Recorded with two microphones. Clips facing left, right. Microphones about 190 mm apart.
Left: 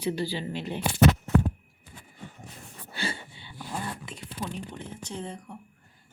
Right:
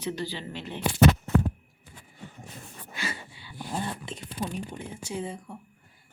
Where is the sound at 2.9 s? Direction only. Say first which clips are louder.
Left 2 dB; 30° left (ahead or behind).